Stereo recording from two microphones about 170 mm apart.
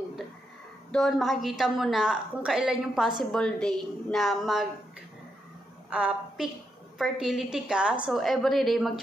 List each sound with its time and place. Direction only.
0.9 s a woman's voice: centre (ahead or behind)
5.9 s a woman's voice: 5° right (ahead or behind)